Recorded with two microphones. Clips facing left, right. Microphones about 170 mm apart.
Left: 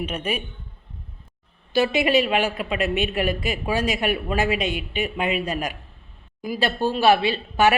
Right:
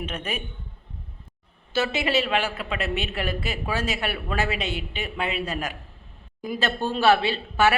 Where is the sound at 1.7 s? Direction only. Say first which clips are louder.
Left 5 dB; 15° left (ahead or behind).